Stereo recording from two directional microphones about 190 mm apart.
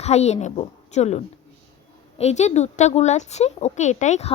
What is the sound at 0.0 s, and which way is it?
A woman's voice, 35° left (ahead or behind).